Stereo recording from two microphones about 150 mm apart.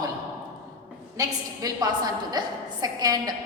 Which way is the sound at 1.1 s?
25° right (ahead or behind).